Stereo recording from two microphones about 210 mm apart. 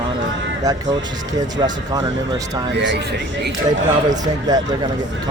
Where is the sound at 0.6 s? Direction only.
15° right (ahead or behind).